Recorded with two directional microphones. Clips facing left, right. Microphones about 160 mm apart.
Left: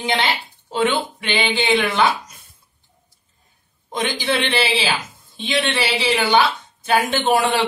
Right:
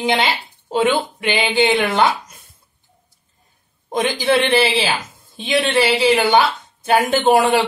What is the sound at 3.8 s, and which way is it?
A woman's voice, 45° right (ahead or behind).